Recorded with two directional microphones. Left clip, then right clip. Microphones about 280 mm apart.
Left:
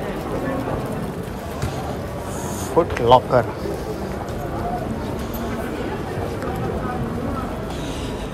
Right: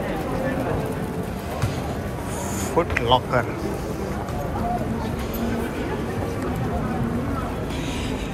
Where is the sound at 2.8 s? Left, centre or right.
Centre.